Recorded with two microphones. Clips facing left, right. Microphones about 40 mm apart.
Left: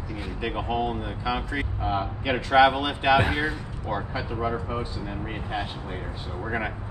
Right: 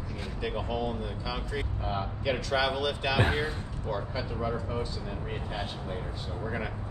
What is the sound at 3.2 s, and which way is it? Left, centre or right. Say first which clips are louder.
Speech: left 3 dB; left.